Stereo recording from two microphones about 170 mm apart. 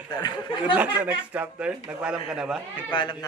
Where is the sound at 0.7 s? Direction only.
10° right (ahead or behind).